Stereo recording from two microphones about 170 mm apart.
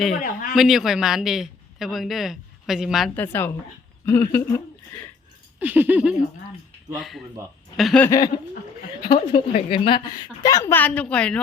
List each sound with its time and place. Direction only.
0.2 s a man's voice: 50° left (ahead or behind)
0.5 s a man's voice: centre (ahead or behind)
3.2 s a woman's voice: 10° left (ahead or behind)
5.5 s a sound: 10° right (ahead or behind)
6.9 s speech: centre (ahead or behind)
8.0 s a woman's voice: 20° left (ahead or behind)